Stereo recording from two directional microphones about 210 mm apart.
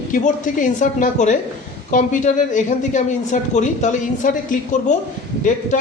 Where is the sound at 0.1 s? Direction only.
35° left (ahead or behind).